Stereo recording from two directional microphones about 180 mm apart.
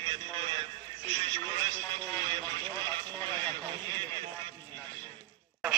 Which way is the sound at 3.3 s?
25° right (ahead or behind).